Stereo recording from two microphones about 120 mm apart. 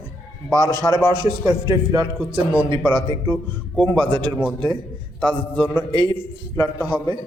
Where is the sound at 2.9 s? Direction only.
40° right (ahead or behind).